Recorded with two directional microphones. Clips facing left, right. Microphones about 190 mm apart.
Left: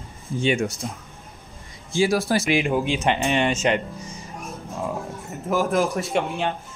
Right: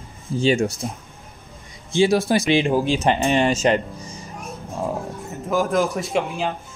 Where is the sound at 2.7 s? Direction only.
35° right (ahead or behind).